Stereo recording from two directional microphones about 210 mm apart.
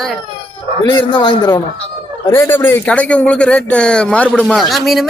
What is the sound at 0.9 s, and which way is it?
A man's voice, 20° left (ahead or behind).